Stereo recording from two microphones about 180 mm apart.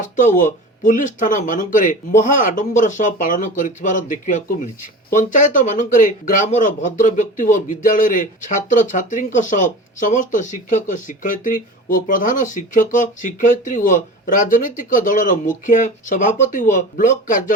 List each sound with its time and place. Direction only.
0.0 s speech: 45° left (ahead or behind)